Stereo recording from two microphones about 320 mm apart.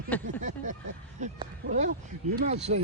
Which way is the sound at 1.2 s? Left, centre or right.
Right.